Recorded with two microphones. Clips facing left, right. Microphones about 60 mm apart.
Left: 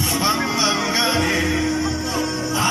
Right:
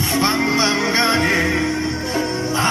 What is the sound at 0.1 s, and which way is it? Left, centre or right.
Music, right.